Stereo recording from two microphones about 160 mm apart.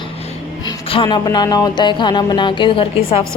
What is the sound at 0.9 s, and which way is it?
A woman's voice, 30° left (ahead or behind).